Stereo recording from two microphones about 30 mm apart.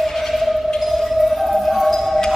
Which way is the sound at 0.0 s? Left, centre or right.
Centre.